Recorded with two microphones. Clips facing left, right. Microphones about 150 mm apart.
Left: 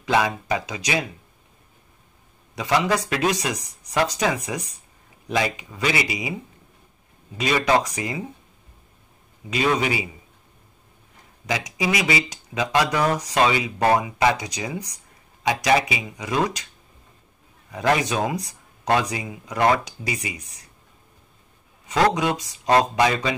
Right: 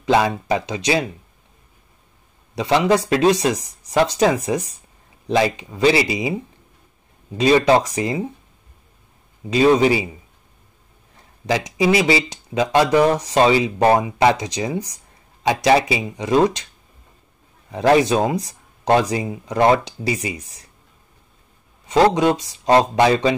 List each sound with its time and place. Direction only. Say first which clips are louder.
0.0 s speech: right 4 dB; 30° right (ahead or behind)
2.5 s speech: right 5 dB; 25° right (ahead or behind)
7.3 s speech: right 6 dB; 30° right (ahead or behind)
9.5 s speech: right 8 dB; 30° right (ahead or behind)
11.4 s speech: right 7 dB; 30° right (ahead or behind)
17.6 s speech: right 7 dB; 30° right (ahead or behind)
21.8 s speech: right 5 dB; 30° right (ahead or behind)